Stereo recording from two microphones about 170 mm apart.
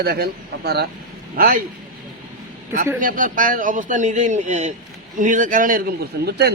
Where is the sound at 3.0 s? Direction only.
55° right (ahead or behind).